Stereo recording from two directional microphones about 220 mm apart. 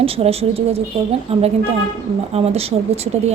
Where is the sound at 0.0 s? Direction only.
25° right (ahead or behind).